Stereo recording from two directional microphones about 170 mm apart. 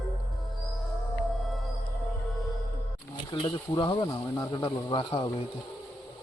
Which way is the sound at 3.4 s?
25° left (ahead or behind).